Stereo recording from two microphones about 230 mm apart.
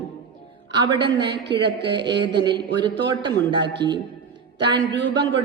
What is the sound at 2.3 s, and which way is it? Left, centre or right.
Speech, centre.